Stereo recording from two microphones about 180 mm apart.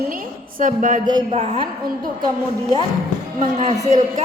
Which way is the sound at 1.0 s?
25° right (ahead or behind).